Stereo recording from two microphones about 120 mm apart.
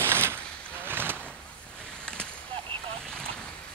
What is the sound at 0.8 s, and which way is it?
Vehicle, 15° right (ahead or behind).